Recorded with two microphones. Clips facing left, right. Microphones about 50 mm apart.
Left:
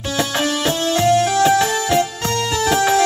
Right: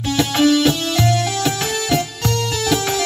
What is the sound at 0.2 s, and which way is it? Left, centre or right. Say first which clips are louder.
Music: right 5 dB; left.